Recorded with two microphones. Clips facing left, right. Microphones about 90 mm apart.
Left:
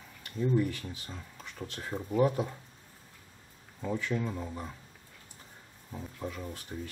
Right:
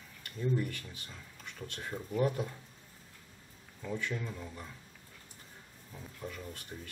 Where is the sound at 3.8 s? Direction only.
35° left (ahead or behind).